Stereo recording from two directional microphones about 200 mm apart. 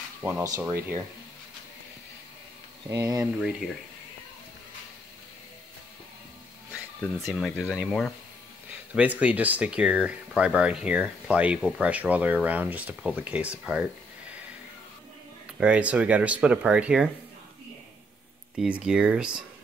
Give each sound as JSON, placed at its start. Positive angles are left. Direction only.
{"t": 0.2, "sound": "speech", "side_deg": -10}
{"t": 2.9, "sound": "speech", "side_deg": -15}
{"t": 3.3, "sound": "speech", "side_deg": -5}
{"t": 7.2, "sound": "speech", "side_deg": 0}
{"t": 15.6, "sound": "speech", "side_deg": -5}
{"t": 18.6, "sound": "speech", "side_deg": -5}